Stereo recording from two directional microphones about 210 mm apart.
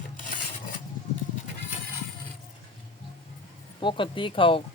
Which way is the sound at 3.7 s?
25° left (ahead or behind).